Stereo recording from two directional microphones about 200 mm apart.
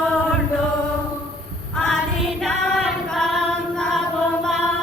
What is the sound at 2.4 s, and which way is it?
Female singing, centre (ahead or behind).